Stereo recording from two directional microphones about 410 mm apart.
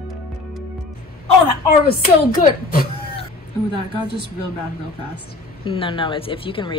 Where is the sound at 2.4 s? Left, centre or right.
Centre.